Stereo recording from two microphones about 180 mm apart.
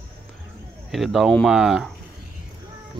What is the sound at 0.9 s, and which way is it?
Speech, centre (ahead or behind).